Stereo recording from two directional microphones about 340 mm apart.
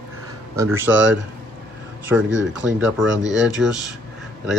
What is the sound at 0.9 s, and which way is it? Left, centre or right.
Speech, right.